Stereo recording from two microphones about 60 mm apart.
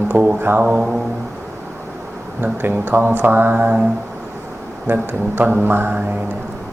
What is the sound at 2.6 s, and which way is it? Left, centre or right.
Speech, right.